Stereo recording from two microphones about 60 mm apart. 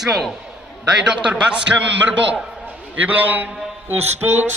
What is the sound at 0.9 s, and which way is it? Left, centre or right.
Speech, right.